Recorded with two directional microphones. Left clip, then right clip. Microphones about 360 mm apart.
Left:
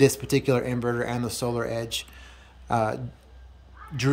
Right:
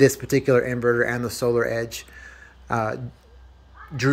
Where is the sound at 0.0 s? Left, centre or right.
Centre.